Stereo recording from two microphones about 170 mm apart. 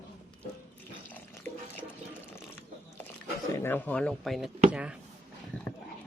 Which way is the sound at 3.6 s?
10° left (ahead or behind).